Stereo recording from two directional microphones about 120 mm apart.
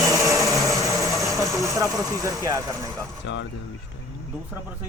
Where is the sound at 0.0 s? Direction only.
25° right (ahead or behind).